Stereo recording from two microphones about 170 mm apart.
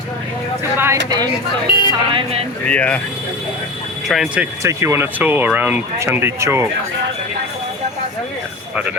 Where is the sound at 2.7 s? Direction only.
10° left (ahead or behind).